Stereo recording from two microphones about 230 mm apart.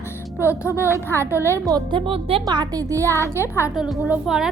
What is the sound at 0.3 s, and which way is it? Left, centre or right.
Music, centre.